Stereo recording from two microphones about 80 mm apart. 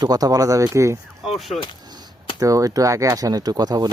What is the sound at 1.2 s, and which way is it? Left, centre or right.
Speech, centre.